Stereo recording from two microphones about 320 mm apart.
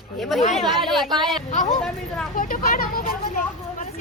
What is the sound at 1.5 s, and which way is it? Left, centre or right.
Speech, centre.